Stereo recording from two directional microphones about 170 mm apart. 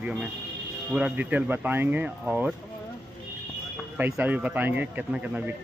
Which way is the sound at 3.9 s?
10° right (ahead or behind).